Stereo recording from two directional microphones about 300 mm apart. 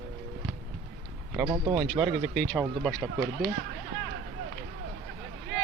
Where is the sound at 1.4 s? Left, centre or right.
Centre.